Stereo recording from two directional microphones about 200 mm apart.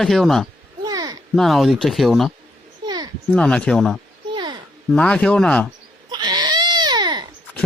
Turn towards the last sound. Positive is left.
turn(degrees=-20)  # may be behind; listen again after turning